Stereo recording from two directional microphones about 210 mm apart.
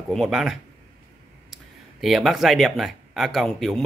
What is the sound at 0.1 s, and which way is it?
Speech, centre (ahead or behind).